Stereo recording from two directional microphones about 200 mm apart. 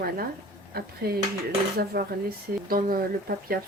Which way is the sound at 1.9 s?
50° right (ahead or behind).